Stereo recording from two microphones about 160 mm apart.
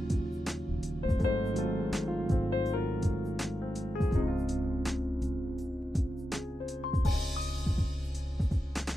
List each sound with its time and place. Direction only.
1.0 s music: centre (ahead or behind)
2.5 s music: 20° left (ahead or behind)
3.0 s music: centre (ahead or behind)